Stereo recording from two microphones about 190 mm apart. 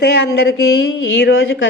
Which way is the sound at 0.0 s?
60° left (ahead or behind).